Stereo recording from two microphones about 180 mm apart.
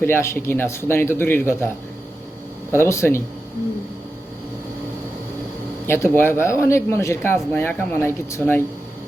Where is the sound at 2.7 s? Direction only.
15° left (ahead or behind).